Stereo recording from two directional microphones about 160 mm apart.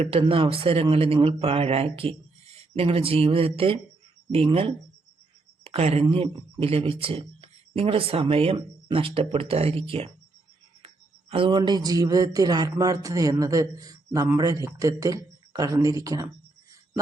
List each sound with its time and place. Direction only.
0.0 s a man's voice: 35° right (ahead or behind); by 16.3 s 20° right (ahead or behind)